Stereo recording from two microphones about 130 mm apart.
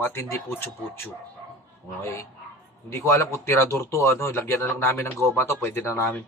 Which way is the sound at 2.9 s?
20° left (ahead or behind).